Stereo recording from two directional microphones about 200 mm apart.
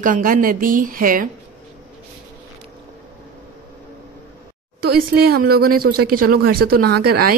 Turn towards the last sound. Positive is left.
turn(degrees=-50)  # may be behind; listen again after turning